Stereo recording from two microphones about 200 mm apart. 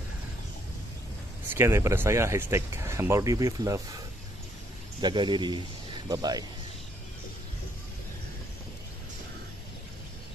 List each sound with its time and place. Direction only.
1.5 s speech: 10° right (ahead or behind)
5.0 s a man's voice: 25° right (ahead or behind)